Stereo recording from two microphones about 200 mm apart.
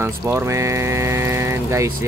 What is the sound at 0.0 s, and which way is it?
Speech, 10° right (ahead or behind).